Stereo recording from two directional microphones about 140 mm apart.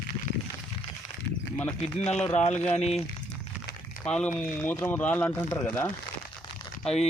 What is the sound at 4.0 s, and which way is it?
Speech, 5° left (ahead or behind).